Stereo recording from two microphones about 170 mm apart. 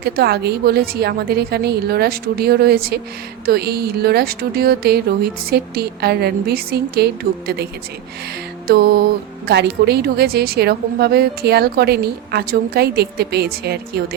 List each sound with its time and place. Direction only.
0.0 s a woman's voice: 70° right (ahead or behind)
8.6 s music: 65° right (ahead or behind)
9.5 s a woman's voice: 75° right (ahead or behind)